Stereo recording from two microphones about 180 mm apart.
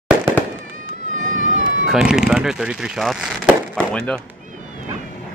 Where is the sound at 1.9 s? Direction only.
5° right (ahead or behind).